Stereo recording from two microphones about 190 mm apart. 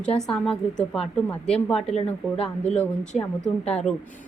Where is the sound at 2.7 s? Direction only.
5° left (ahead or behind).